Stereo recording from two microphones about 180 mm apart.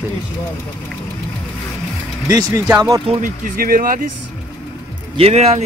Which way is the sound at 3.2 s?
50° right (ahead or behind).